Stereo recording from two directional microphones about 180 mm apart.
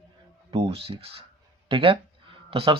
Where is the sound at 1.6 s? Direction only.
30° right (ahead or behind).